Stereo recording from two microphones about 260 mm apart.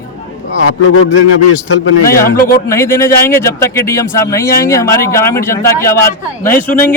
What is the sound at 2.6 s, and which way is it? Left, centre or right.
A man's voice, centre.